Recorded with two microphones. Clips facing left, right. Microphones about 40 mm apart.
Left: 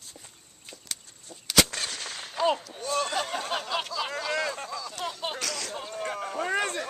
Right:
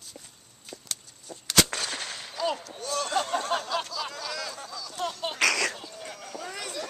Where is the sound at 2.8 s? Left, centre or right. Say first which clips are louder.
Left 1 dB; left.